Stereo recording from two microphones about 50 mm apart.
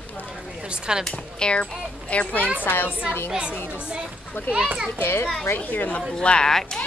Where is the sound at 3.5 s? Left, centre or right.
Left.